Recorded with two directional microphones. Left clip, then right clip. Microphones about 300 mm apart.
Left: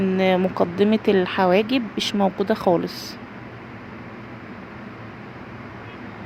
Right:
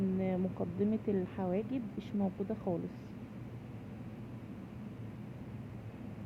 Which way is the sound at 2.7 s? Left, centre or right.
Left.